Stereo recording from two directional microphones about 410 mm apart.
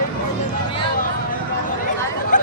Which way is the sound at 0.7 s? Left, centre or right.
Centre.